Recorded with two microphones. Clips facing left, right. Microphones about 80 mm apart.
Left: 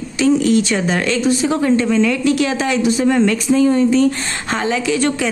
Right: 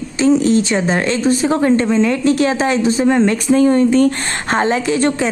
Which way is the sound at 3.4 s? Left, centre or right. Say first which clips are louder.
Right 3 dB; right.